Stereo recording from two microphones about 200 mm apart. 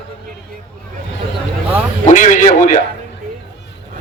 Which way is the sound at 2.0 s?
40° left (ahead or behind).